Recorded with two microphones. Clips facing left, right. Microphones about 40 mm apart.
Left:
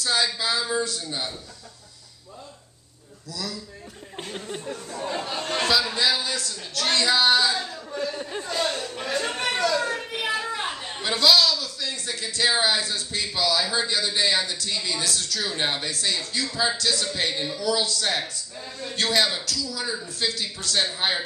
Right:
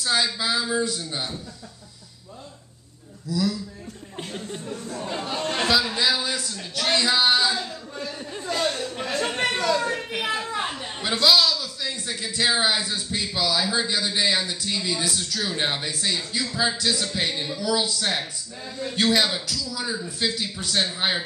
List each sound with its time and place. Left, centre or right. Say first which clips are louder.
0.0 s a man's voice: right 1 dB; centre
3.3 s a man's voice: right 9 dB; centre
4.3 s speech: left 1 dB; centre
4.9 s a man's voice: left 2 dB; centre
5.2 s a man's voice: right 3 dB; centre
9.2 s a man's voice: right 2 dB; centre
10.7 s a man's voice: even; centre